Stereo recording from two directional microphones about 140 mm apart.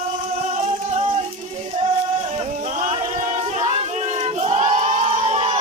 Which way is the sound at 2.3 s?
55° right (ahead or behind).